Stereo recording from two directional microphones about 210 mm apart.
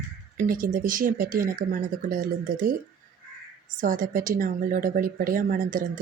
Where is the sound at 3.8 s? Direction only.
40° right (ahead or behind).